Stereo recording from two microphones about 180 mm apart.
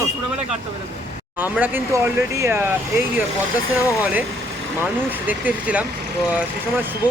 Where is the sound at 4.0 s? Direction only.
10° right (ahead or behind).